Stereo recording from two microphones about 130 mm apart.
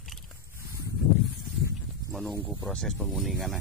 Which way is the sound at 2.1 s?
Centre (ahead or behind).